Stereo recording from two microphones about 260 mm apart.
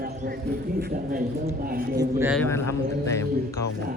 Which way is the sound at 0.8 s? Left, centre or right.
Right.